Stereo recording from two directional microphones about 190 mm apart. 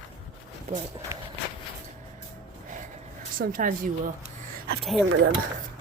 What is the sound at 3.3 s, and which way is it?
Speech, 50° right (ahead or behind).